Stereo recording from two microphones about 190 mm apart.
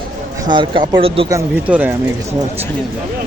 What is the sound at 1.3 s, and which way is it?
Speech, 15° right (ahead or behind).